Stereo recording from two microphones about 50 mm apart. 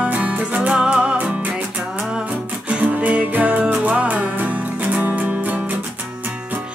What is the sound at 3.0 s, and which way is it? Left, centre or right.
Music, right.